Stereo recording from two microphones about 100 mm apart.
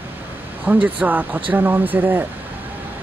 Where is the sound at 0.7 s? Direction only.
15° right (ahead or behind).